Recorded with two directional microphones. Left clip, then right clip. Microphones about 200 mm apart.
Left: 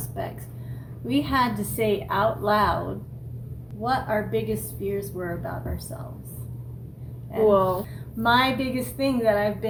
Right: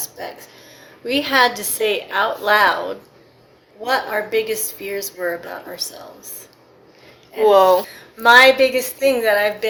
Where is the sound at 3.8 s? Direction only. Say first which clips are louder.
Right 5 dB; 25° right (ahead or behind).